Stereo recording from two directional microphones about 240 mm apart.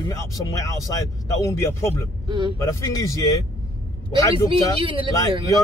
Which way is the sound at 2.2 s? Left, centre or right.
Centre.